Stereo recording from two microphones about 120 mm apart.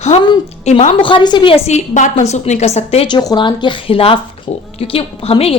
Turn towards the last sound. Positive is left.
turn(degrees=55)  # may be behind; listen again after turning